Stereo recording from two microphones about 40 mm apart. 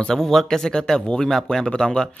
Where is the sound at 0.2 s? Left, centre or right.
Centre.